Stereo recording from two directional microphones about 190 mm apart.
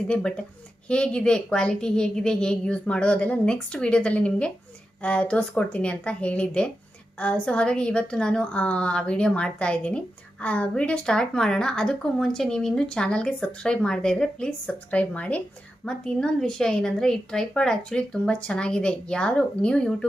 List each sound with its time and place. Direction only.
0.1 s a woman's voice: 5° left (ahead or behind)